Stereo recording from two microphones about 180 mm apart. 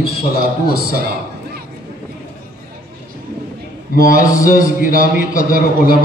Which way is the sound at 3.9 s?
50° left (ahead or behind).